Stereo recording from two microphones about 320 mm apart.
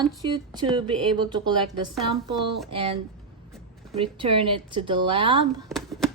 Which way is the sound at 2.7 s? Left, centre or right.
Centre.